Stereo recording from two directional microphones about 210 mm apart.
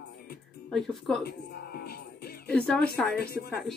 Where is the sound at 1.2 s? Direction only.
50° left (ahead or behind).